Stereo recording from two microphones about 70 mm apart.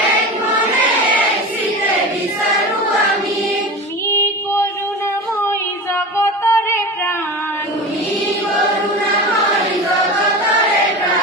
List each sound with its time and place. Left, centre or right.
4.1 s female singing: left
6.1 s music: left